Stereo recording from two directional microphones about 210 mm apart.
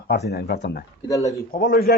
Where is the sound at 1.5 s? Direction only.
45° left (ahead or behind).